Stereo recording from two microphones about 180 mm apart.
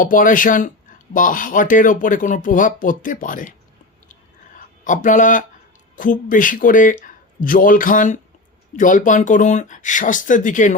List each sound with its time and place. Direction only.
0.0 s speech: 50° left (ahead or behind)
4.5 s speech: 45° left (ahead or behind)